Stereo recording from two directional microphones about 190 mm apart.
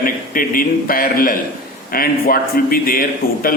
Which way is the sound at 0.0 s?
50° left (ahead or behind).